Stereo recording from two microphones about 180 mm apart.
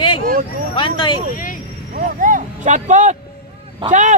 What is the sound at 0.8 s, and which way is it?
Speech, 25° left (ahead or behind).